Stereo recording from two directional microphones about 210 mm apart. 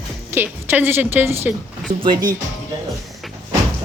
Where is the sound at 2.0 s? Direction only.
20° right (ahead or behind).